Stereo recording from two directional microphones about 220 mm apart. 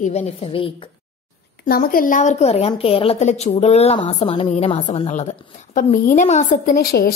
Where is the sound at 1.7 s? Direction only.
40° left (ahead or behind).